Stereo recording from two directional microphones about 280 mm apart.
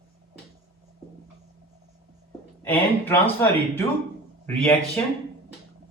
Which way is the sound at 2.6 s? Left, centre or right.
Centre.